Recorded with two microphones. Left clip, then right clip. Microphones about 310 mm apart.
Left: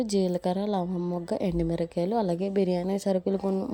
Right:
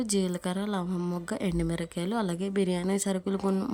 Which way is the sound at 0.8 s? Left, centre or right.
Centre.